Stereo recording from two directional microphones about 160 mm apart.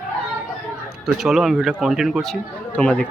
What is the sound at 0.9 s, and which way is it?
Speech, centre (ahead or behind).